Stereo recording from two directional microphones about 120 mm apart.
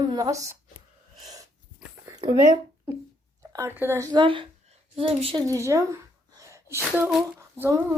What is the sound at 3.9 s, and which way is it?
Speech, 30° right (ahead or behind).